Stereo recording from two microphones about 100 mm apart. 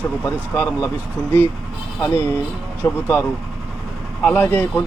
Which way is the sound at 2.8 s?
20° left (ahead or behind).